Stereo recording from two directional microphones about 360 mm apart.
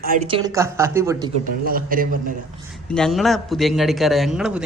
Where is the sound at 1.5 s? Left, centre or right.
Right.